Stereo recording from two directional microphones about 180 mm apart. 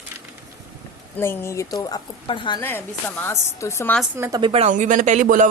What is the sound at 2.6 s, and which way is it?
Speech, 10° left (ahead or behind).